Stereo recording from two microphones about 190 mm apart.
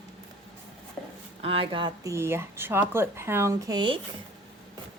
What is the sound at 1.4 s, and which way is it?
Speech, 30° right (ahead or behind).